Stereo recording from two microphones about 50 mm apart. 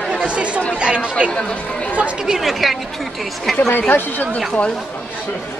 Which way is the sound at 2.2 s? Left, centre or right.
Centre.